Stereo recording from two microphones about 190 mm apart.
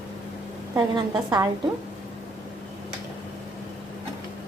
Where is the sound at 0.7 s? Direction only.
20° right (ahead or behind).